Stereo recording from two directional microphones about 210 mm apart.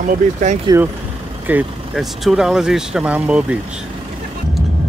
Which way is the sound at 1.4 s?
5° right (ahead or behind).